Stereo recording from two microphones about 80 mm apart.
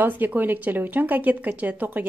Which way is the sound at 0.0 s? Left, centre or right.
Right.